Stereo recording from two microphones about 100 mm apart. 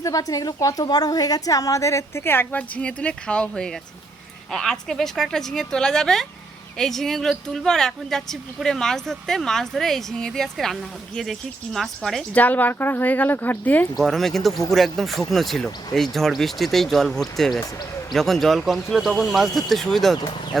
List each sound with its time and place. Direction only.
0.0 s a woman's voice: 35° left (ahead or behind); by 12.2 s 5° left (ahead or behind)
12.3 s speech: 15° left (ahead or behind)
14.0 s speech: centre (ahead or behind)